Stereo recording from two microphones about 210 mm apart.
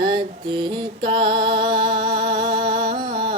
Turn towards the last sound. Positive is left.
turn(degrees=-25)  # may be behind; listen again after turning